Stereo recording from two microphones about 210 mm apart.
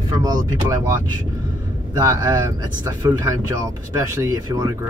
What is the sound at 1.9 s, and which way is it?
Speech, 15° right (ahead or behind).